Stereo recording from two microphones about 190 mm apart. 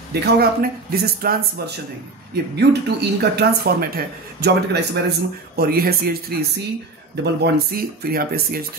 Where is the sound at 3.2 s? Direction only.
55° right (ahead or behind).